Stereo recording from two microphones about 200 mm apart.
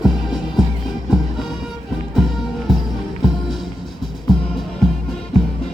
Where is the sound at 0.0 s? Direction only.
Centre (ahead or behind).